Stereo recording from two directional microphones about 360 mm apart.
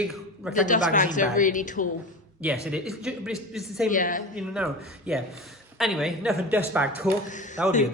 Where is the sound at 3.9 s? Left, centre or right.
Left.